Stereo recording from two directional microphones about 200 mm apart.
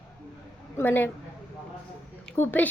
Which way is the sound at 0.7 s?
10° left (ahead or behind).